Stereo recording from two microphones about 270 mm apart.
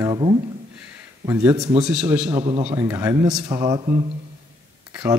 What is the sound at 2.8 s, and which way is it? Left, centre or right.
Speech, centre.